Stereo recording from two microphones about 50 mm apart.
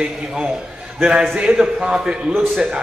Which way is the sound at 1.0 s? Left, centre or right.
Centre.